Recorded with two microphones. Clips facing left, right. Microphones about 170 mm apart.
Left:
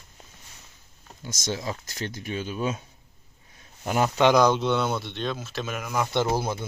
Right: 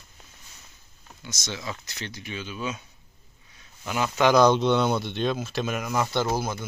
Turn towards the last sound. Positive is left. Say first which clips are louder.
# left 1 dB
turn(degrees=30)  # may be behind; listen again after turning